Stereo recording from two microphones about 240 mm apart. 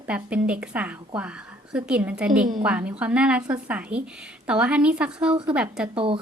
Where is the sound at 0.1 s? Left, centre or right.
Centre.